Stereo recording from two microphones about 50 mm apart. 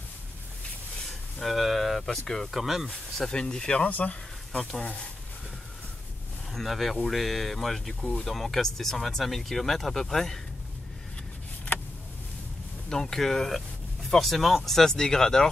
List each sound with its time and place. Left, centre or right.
1.4 s a sound: centre
2.2 s speech: centre
2.5 s speech: centre
2.9 s speech: centre
3.8 s speech: left
4.5 s speech: centre
6.5 s speech: centre
12.9 s speech: centre